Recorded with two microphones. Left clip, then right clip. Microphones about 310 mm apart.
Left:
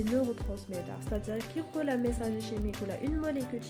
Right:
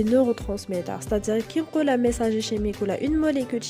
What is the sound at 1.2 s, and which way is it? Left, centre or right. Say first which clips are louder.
Speech: right 12 dB; right.